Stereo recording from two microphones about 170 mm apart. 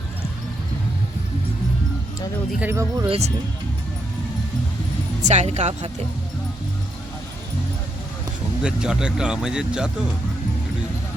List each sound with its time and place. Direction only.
2.5 s speech: 10° right (ahead or behind)
3.1 s speech: 40° right (ahead or behind)
5.2 s speech: 40° right (ahead or behind)
8.6 s speech: 5° right (ahead or behind)